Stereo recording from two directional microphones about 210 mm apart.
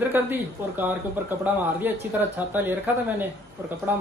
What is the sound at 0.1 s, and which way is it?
Speech, 10° right (ahead or behind).